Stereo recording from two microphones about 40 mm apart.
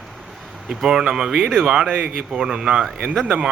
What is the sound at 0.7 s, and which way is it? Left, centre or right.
Speech, centre.